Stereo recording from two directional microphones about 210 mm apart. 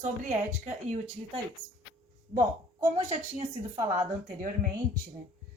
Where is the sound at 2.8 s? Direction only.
30° right (ahead or behind).